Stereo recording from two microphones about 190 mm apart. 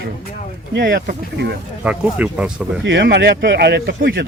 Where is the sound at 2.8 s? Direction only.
65° right (ahead or behind).